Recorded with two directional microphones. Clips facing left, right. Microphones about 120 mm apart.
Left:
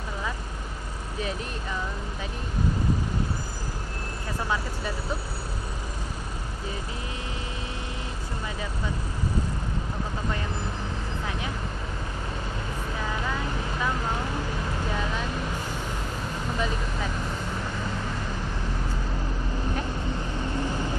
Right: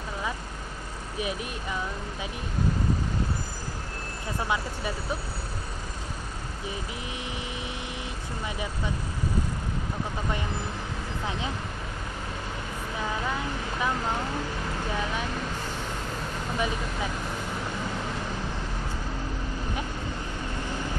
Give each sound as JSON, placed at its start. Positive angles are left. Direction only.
{"t": 16.5, "sound": "speech", "side_deg": -10}